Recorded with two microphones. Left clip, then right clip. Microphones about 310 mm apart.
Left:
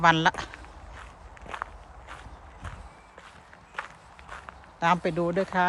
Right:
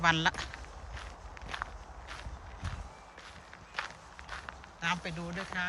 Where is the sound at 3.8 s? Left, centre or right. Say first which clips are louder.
Left 2 dB; centre.